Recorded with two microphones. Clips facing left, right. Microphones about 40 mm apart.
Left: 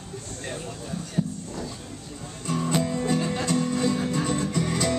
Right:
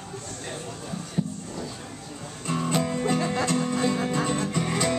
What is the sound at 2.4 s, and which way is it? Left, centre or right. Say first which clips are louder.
Music: even; centre.